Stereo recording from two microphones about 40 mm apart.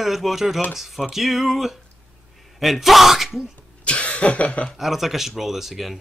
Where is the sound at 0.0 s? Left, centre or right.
Centre.